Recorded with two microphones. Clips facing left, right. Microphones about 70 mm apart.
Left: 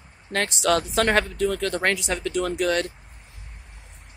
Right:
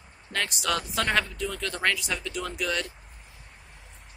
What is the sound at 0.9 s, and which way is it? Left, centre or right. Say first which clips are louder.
Speech: left 5 dB; left.